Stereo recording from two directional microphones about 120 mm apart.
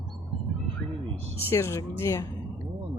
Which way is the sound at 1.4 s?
20° left (ahead or behind).